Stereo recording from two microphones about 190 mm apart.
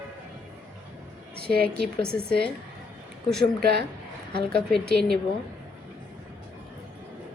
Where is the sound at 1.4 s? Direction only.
5° left (ahead or behind).